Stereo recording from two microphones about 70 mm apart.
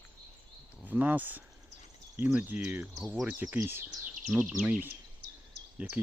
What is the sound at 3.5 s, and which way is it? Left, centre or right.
Speech, right.